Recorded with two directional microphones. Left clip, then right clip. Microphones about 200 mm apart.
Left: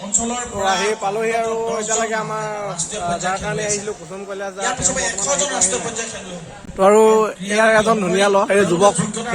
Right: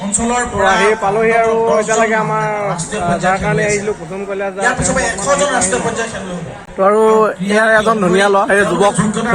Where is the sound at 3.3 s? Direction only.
5° left (ahead or behind).